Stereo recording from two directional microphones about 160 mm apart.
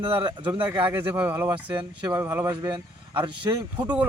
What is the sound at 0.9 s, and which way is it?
A man's voice, 15° right (ahead or behind).